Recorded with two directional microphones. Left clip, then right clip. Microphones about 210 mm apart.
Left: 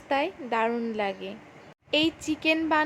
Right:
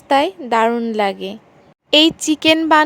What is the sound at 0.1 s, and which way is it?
A woman's voice, 40° right (ahead or behind).